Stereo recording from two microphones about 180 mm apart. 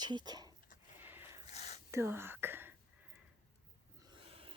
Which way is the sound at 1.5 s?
35° left (ahead or behind).